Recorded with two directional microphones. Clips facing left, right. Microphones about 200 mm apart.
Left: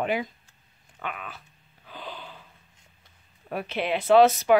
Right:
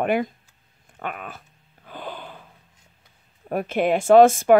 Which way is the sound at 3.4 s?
45° right (ahead or behind).